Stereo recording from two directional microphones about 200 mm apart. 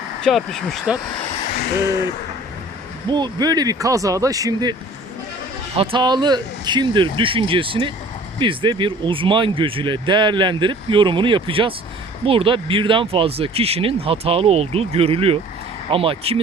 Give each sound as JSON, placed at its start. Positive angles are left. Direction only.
{"t": 0.2, "sound": "speech", "side_deg": 0}
{"t": 3.1, "sound": "speech", "side_deg": -20}